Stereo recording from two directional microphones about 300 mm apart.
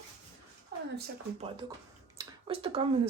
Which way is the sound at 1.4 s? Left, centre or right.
Centre.